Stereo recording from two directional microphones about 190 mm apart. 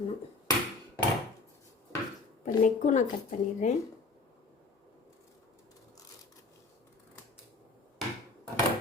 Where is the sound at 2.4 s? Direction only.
40° left (ahead or behind).